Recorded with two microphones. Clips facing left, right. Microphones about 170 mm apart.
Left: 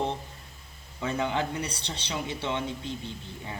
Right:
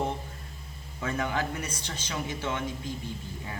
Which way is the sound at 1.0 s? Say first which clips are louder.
Left 2 dB; 20° left (ahead or behind).